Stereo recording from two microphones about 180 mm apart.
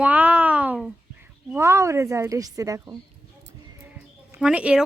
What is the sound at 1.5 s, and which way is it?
Speech, 15° right (ahead or behind).